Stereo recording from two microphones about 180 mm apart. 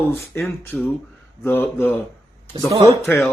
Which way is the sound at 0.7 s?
10° left (ahead or behind).